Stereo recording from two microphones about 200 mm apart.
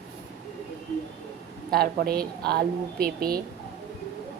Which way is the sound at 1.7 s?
50° right (ahead or behind).